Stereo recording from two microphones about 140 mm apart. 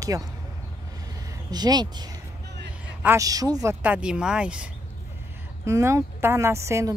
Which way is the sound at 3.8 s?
10° right (ahead or behind).